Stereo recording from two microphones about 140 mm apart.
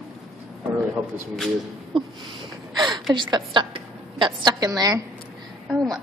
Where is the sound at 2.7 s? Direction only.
30° right (ahead or behind).